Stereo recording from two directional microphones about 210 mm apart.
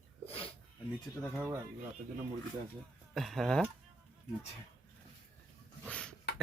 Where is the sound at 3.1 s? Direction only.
Centre (ahead or behind).